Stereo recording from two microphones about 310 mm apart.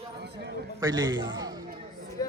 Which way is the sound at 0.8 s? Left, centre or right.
Centre.